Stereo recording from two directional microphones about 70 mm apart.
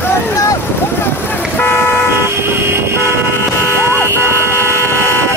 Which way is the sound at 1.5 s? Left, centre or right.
Left.